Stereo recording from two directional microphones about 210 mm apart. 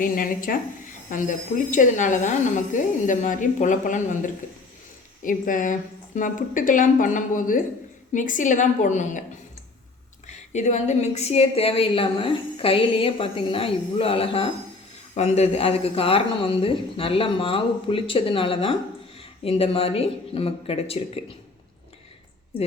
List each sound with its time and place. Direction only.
0.0 s a woman's voice: 40° left (ahead or behind)
10.2 s a woman's voice: 35° left (ahead or behind)